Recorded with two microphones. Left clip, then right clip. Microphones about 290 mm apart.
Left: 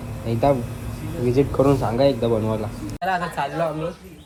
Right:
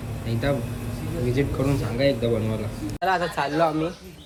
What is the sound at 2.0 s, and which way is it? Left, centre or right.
Speech, centre.